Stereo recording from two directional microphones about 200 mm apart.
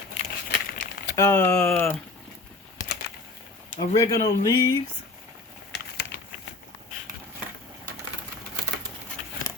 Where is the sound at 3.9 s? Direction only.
20° left (ahead or behind).